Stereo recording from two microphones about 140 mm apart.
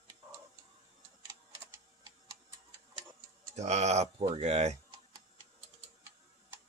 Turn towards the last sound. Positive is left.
turn(degrees=-50)  # may be behind; listen again after turning